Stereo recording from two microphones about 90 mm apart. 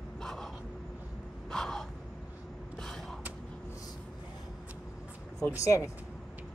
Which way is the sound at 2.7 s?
5° left (ahead or behind).